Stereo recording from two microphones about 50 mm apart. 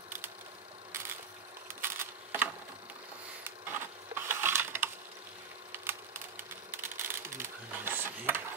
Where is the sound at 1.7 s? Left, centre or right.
Right.